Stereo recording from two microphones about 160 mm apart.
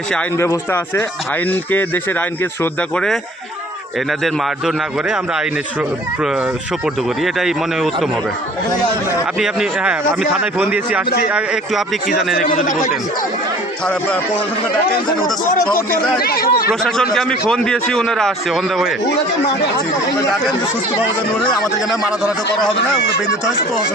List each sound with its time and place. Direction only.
0.3 s speech: 15° left (ahead or behind)
4.2 s a man's voice: centre (ahead or behind)
7.3 s a man's voice: centre (ahead or behind)
9.4 s a man's voice: 5° right (ahead or behind)
12.4 s speech: 55° left (ahead or behind)
16.2 s speech: 70° left (ahead or behind)
17.2 s a man's voice: 5° left (ahead or behind)